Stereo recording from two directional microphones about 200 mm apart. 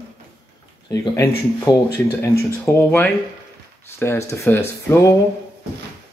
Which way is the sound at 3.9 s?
10° left (ahead or behind).